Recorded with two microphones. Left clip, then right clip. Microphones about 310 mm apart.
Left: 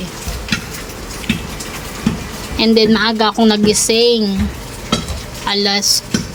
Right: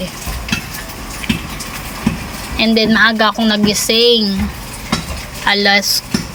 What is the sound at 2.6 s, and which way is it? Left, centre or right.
Speech, centre.